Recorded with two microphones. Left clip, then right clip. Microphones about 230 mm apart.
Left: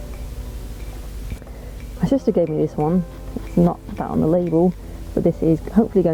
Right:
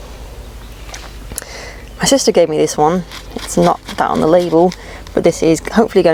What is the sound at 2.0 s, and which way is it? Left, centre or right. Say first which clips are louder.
Speech: right 8 dB; centre.